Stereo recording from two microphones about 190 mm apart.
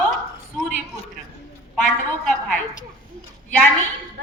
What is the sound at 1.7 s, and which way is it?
Speech, 5° left (ahead or behind).